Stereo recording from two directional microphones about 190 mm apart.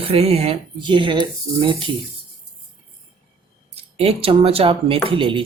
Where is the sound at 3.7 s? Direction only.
30° right (ahead or behind).